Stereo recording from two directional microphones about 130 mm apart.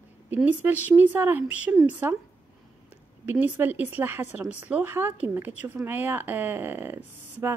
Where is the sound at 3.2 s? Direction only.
15° right (ahead or behind).